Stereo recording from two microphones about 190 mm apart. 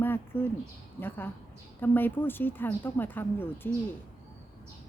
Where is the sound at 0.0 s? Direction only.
10° left (ahead or behind).